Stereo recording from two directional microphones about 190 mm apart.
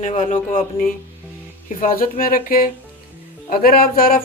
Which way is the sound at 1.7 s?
45° left (ahead or behind).